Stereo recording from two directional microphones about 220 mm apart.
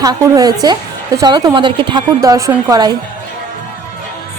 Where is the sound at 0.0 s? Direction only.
15° right (ahead or behind).